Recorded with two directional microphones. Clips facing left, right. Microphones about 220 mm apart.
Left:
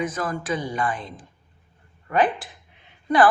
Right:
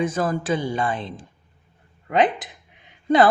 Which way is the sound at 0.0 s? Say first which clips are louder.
Right 4 dB; 30° right (ahead or behind).